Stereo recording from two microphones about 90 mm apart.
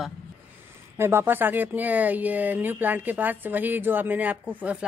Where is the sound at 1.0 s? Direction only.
25° right (ahead or behind).